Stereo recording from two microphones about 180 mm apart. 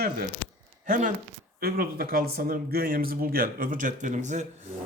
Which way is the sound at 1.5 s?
55° right (ahead or behind).